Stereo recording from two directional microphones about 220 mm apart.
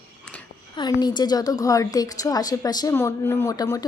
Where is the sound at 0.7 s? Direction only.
20° left (ahead or behind).